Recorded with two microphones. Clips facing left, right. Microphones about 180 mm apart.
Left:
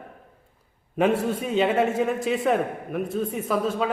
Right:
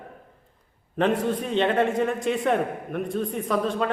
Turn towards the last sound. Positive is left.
turn(degrees=5)  # may be behind; listen again after turning